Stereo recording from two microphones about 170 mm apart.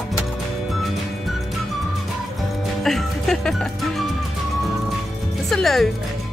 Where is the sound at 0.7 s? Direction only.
Centre (ahead or behind).